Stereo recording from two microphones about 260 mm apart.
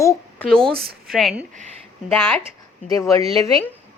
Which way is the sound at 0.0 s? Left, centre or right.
Centre.